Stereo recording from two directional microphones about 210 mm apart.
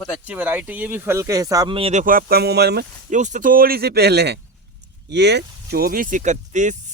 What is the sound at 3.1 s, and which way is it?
Speech, 35° right (ahead or behind).